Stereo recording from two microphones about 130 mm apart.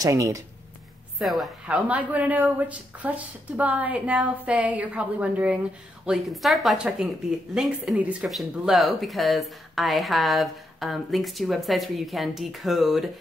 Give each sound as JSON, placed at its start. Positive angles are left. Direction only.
{"t": 0.0, "sound": "speech", "side_deg": -25}
{"t": 1.2, "sound": "speech", "side_deg": 0}
{"t": 1.8, "sound": "speech", "side_deg": -10}
{"t": 6.0, "sound": "speech", "side_deg": 0}